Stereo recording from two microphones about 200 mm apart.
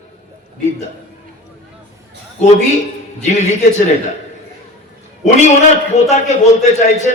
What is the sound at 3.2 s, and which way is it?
Music, 35° left (ahead or behind).